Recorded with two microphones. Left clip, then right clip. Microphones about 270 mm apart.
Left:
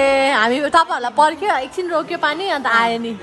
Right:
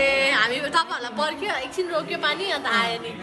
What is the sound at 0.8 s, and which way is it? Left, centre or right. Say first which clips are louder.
A woman's voice: left 11 dB; left.